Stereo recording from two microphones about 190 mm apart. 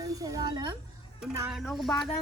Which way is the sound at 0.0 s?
20° right (ahead or behind).